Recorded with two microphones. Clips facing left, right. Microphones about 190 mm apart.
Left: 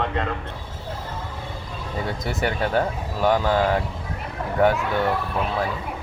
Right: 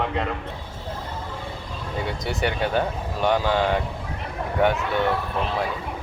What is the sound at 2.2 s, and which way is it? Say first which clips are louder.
Speech: even; centre (ahead or behind).